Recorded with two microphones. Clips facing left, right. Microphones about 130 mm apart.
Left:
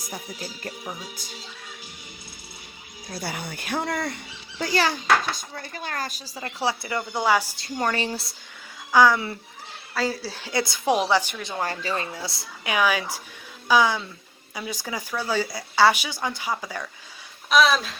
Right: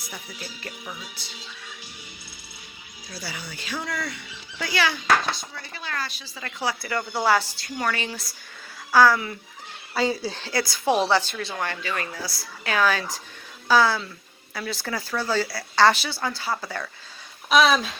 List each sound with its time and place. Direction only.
0.0 s speech: 45° left (ahead or behind)
3.1 s speech: 55° left (ahead or behind); by 7.0 s 25° left (ahead or behind)
7.2 s speech: 15° left (ahead or behind)
7.6 s speech: 35° left (ahead or behind)
8.9 s speech: 15° left (ahead or behind)
9.9 s speech: centre (ahead or behind)
10.4 s speech: 20° left (ahead or behind)
11.6 s speech: 35° left (ahead or behind); by 16.9 s 10° left (ahead or behind)
17.5 s speech: centre (ahead or behind)